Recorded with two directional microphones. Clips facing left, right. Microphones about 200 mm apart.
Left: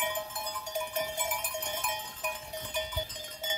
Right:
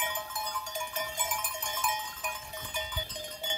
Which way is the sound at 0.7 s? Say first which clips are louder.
Left 4 dB; 60° left (ahead or behind).